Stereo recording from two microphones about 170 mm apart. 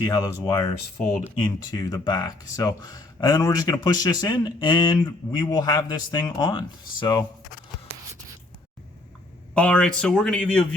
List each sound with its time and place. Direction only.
0.0 s speech: 25° left (ahead or behind)
9.6 s speech: 5° left (ahead or behind)